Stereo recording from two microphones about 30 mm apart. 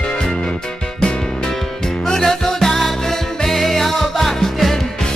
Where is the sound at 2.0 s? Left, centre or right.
Centre.